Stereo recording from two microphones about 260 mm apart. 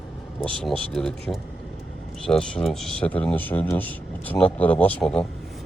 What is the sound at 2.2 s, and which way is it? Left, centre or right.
Speech, centre.